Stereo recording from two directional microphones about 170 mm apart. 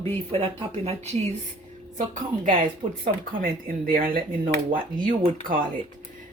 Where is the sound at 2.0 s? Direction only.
50° right (ahead or behind).